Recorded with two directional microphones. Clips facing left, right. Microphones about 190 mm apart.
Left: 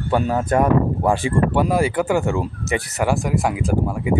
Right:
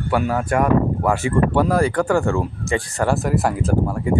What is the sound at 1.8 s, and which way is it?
Speech, 5° left (ahead or behind).